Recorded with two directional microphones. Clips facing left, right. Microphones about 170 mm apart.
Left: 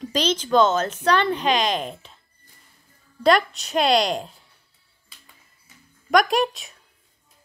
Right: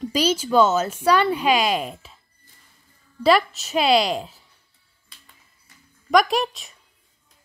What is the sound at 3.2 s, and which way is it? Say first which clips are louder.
Speech: right 1 dB; 5° right (ahead or behind).